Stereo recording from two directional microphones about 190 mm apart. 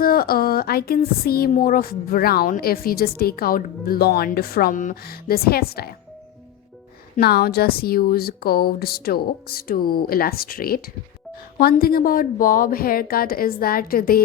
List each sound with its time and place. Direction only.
0.0 s speech: 50° left (ahead or behind)
7.2 s speech: 55° left (ahead or behind)